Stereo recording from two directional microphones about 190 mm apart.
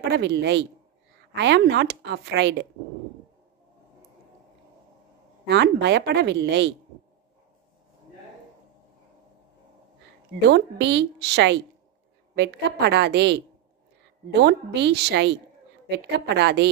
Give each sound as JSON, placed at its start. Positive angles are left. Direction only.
{"t": 0.1, "sound": "speech", "side_deg": -65}
{"t": 5.5, "sound": "speech", "side_deg": -65}
{"t": 10.5, "sound": "speech", "side_deg": -65}